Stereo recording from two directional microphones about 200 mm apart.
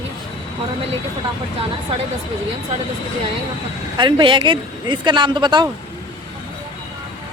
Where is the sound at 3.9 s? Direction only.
25° right (ahead or behind).